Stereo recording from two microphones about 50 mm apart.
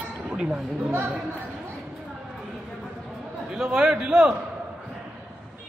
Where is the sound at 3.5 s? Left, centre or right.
Centre.